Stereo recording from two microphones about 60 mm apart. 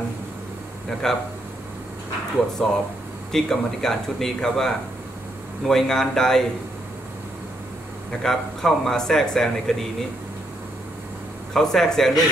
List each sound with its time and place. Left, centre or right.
1.0 s speech: centre
2.6 s speech: centre
8.2 s speech: centre
11.5 s speech: centre